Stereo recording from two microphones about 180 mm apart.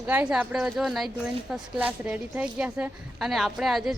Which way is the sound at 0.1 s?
5° right (ahead or behind).